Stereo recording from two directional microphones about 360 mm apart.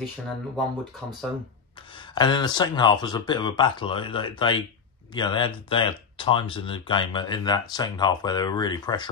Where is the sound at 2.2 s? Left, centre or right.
Centre.